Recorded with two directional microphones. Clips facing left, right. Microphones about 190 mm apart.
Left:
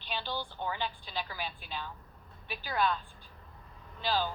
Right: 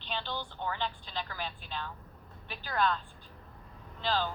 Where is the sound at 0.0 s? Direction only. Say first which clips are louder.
Even; 10° left (ahead or behind).